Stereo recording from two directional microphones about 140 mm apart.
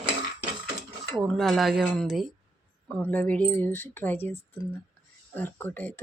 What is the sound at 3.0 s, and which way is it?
Speech, 10° left (ahead or behind).